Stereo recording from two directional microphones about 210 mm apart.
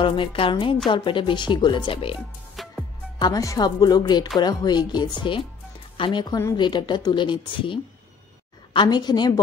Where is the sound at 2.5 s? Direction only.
Centre (ahead or behind).